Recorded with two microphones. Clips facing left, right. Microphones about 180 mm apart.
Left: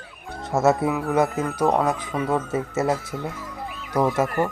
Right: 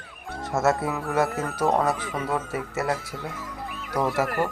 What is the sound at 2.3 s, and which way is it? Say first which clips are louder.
Speech: left 5 dB; 25° left (ahead or behind).